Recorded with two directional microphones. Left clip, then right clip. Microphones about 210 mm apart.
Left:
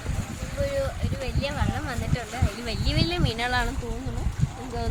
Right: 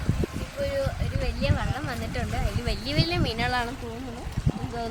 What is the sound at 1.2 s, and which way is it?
Speech, 10° right (ahead or behind).